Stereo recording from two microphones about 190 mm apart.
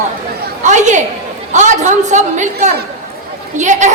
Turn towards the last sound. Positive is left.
turn(degrees=-40)  # may be behind; listen again after turning